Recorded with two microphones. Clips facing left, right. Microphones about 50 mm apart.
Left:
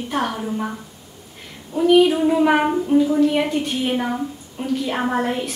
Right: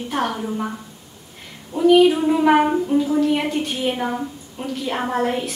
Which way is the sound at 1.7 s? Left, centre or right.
Centre.